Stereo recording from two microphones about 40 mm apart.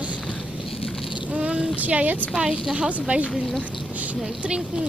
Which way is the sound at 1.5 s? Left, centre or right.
Right.